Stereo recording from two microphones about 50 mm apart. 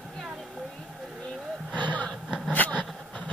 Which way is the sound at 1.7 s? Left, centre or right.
Left.